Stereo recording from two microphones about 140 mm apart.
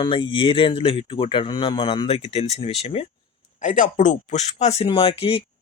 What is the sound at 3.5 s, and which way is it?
Speech, 65° left (ahead or behind).